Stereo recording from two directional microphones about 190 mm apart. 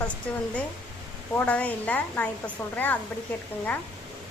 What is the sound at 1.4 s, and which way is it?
Speech, 5° left (ahead or behind).